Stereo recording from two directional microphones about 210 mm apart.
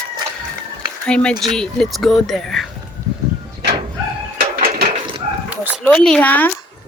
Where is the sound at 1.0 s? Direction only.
5° left (ahead or behind).